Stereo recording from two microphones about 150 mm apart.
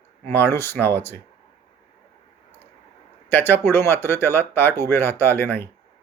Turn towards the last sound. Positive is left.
turn(degrees=15)  # may be behind; listen again after turning